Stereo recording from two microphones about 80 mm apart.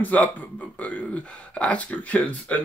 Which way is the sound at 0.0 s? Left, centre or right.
Centre.